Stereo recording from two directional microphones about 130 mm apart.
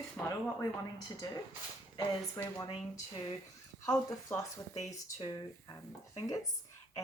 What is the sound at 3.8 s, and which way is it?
Speech, 25° left (ahead or behind).